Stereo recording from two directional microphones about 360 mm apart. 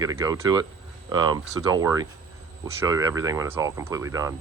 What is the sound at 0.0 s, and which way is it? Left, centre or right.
Speech, centre.